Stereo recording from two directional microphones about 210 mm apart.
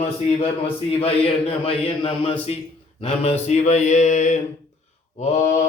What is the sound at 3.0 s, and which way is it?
Mantra, 30° left (ahead or behind).